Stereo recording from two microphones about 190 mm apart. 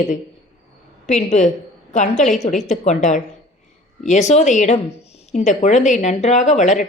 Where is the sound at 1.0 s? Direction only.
40° left (ahead or behind).